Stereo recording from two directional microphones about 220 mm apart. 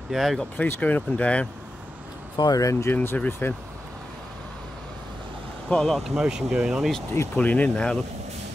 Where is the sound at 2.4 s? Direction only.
15° left (ahead or behind).